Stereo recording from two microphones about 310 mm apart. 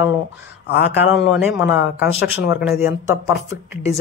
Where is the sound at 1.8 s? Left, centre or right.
Left.